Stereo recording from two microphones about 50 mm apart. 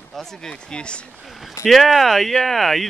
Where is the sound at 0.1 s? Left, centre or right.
Centre.